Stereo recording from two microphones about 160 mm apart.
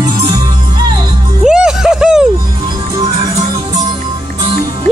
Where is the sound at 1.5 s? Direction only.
5° right (ahead or behind).